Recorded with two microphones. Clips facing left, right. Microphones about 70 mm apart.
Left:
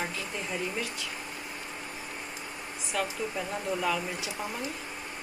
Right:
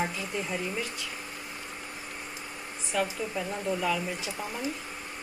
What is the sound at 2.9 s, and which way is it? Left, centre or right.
Dishes, centre.